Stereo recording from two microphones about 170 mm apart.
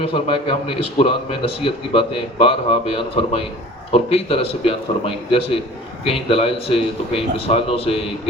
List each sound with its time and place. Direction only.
0.0 s speech: 35° left (ahead or behind)